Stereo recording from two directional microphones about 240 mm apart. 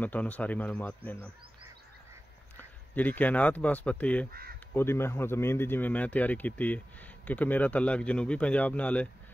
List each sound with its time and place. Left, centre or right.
0.0 s speech: centre
2.9 s speech: centre
4.3 s speech: right
4.7 s speech: centre